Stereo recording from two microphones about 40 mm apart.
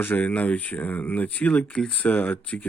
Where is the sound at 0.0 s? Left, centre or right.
Left.